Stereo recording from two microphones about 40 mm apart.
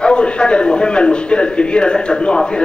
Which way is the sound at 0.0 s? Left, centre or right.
Left.